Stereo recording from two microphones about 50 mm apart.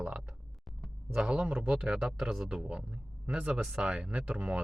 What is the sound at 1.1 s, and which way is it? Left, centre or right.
Speech, centre.